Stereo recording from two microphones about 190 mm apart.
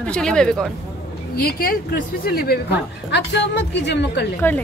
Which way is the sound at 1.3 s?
50° left (ahead or behind).